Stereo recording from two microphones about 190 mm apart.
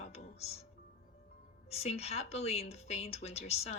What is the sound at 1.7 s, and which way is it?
Speech, 35° left (ahead or behind).